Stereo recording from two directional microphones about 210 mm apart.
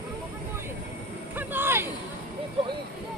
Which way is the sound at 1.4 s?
10° right (ahead or behind).